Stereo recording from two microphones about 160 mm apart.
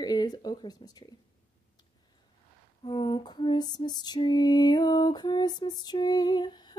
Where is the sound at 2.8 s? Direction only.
35° left (ahead or behind).